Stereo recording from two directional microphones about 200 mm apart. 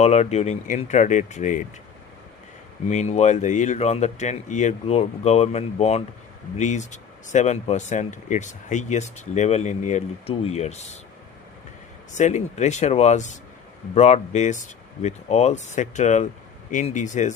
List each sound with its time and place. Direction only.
0.0 s speech: 35° left (ahead or behind)
2.9 s speech: 35° left (ahead or behind)
12.1 s speech: 35° left (ahead or behind)